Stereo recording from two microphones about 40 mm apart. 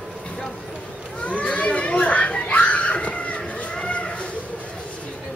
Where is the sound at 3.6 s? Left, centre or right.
Left.